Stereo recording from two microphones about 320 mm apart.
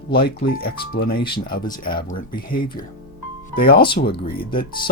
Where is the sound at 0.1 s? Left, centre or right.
Left.